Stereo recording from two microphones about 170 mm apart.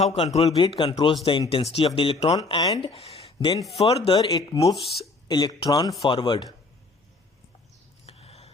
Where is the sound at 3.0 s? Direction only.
35° left (ahead or behind).